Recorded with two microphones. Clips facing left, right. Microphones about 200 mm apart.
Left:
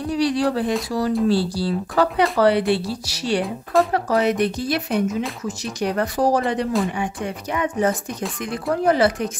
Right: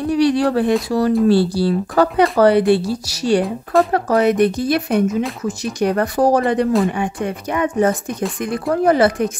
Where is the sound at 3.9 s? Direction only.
50° right (ahead or behind).